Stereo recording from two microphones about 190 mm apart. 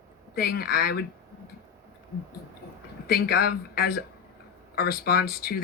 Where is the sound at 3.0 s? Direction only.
55° left (ahead or behind).